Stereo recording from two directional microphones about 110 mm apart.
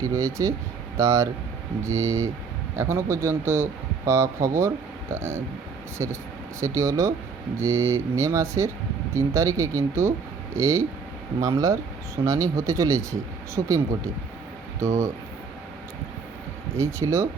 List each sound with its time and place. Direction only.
0.0 s speech: 30° right (ahead or behind)
16.7 s speech: 25° right (ahead or behind)